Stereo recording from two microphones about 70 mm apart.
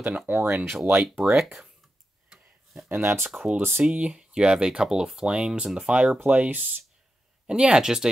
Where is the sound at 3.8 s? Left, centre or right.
Centre.